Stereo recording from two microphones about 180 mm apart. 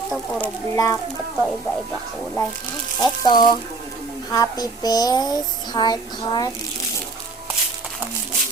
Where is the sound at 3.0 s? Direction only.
25° left (ahead or behind).